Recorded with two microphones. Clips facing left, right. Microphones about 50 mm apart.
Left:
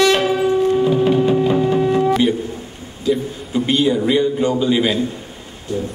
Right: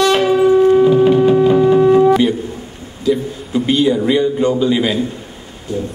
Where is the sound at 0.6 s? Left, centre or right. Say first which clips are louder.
Right 7 dB; centre.